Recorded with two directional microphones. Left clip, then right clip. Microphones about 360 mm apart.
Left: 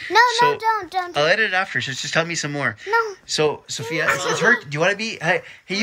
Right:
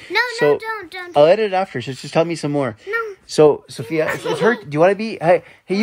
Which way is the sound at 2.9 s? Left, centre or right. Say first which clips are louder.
Left 5 dB; centre.